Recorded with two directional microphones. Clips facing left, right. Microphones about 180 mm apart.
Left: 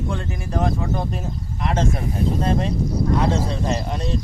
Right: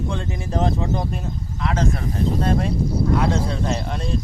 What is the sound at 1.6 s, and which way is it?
Speech, 20° left (ahead or behind).